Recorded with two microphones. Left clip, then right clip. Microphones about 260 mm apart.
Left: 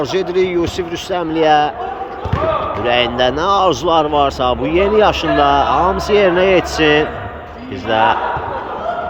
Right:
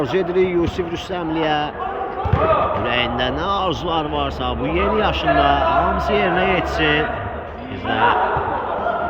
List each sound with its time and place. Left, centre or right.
0.0 s speech: centre
2.8 s speech: centre